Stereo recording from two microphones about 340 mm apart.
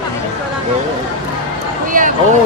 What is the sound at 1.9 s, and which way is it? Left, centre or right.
Speech, right.